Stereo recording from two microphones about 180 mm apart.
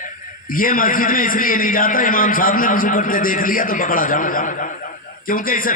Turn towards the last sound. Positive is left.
turn(degrees=50)  # may be behind; listen again after turning